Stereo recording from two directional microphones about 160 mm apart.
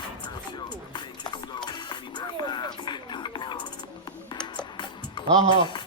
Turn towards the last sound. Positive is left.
turn(degrees=-30)  # may be behind; listen again after turning